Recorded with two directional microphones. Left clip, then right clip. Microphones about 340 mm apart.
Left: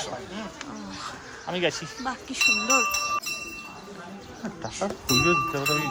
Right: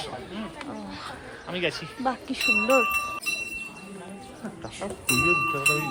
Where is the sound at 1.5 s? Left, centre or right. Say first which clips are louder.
Left 2 dB; left.